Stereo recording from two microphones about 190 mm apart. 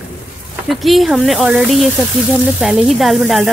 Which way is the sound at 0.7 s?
Centre (ahead or behind).